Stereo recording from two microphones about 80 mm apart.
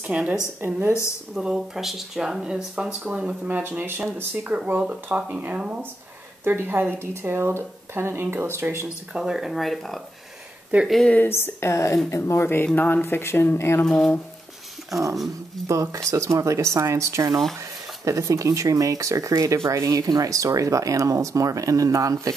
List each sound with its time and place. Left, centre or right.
0.0 s speech: centre
1.3 s speech: centre; by 8.8 s right
8.8 s speech: centre
10.7 s speech: right
11.2 s speech: left
13.8 s speech: centre
15.6 s speech: right